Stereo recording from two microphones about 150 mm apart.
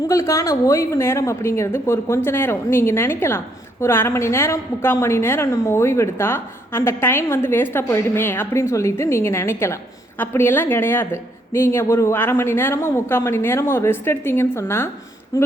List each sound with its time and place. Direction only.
0.1 s a woman's voice: 20° left (ahead or behind)